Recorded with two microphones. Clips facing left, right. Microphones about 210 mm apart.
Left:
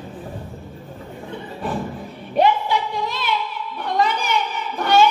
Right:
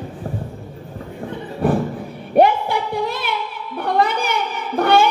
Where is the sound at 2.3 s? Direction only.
55° right (ahead or behind).